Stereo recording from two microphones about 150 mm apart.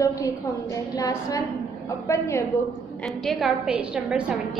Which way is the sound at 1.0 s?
20° left (ahead or behind).